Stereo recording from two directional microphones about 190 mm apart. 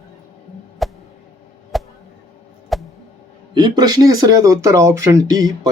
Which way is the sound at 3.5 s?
20° right (ahead or behind).